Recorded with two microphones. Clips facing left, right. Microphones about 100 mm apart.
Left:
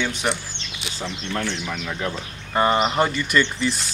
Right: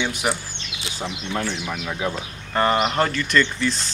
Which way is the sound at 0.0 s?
10° right (ahead or behind).